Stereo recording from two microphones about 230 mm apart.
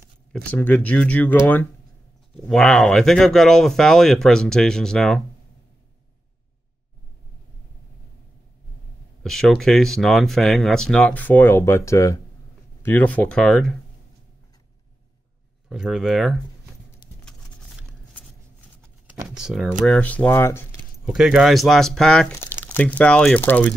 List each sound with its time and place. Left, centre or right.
0.5 s speech: centre
9.2 s speech: centre
15.7 s speech: centre
17.2 s a sound: centre
19.2 s speech: centre
21.0 s speech: centre